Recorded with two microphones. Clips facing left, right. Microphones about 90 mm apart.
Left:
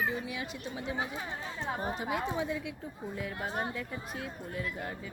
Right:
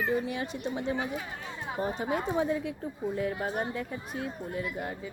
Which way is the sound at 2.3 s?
35° right (ahead or behind).